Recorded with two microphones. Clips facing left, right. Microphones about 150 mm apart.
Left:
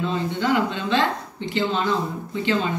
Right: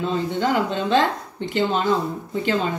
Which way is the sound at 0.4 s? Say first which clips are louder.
Even; 45° right (ahead or behind).